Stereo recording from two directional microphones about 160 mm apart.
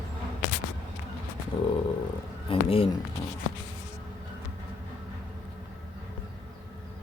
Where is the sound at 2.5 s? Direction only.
35° left (ahead or behind).